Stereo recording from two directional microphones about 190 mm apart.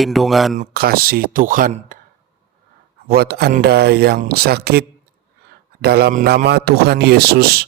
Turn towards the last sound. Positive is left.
turn(degrees=-55)  # may be behind; listen again after turning